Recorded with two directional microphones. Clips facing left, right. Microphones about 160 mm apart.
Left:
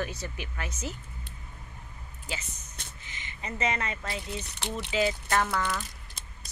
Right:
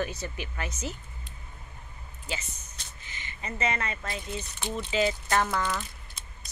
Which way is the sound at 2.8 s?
55° left (ahead or behind).